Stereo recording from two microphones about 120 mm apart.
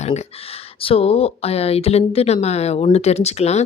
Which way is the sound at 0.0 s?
65° left (ahead or behind).